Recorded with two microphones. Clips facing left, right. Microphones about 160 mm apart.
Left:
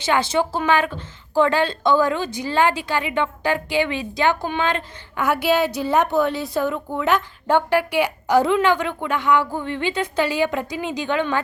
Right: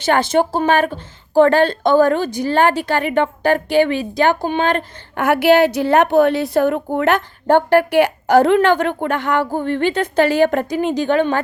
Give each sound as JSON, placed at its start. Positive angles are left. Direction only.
{"t": 0.0, "sound": "a woman's voice", "side_deg": -50}
{"t": 1.5, "sound": "a woman's voice", "side_deg": -50}
{"t": 4.6, "sound": "a woman's voice", "side_deg": -55}